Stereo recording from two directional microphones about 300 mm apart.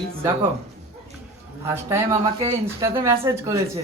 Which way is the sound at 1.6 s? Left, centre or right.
Centre.